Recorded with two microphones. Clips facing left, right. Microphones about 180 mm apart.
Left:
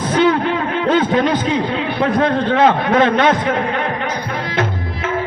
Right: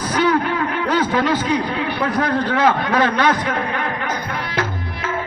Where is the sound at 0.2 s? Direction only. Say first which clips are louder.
Left 3 dB; 25° left (ahead or behind).